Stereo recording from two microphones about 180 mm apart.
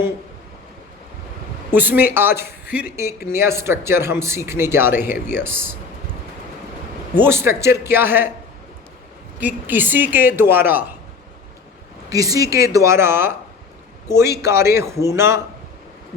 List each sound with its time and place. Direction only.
1.7 s a man's voice: 10° right (ahead or behind)
7.2 s a man's voice: 15° right (ahead or behind)
9.4 s a man's voice: 10° right (ahead or behind)
12.1 s a man's voice: 20° right (ahead or behind)
14.4 s a man's voice: 15° right (ahead or behind)